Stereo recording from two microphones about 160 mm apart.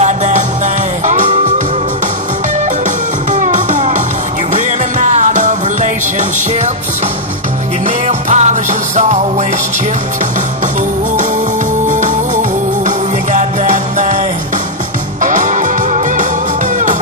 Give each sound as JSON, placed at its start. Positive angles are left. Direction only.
{"t": 0.0, "sound": "music", "side_deg": -45}
{"t": 3.3, "sound": "music", "side_deg": -50}
{"t": 7.8, "sound": "music", "side_deg": -45}
{"t": 11.9, "sound": "music", "side_deg": -50}
{"t": 15.2, "sound": "music", "side_deg": -50}